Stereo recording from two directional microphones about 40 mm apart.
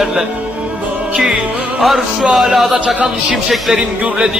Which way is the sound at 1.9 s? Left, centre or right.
Centre.